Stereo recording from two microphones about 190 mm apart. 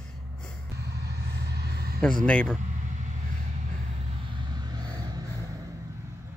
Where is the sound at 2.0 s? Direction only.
5° left (ahead or behind).